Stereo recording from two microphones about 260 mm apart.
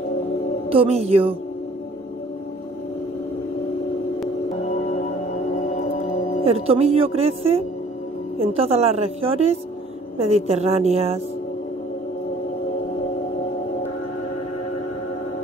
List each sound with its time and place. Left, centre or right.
0.7 s a woman's voice: right
6.4 s a woman's voice: right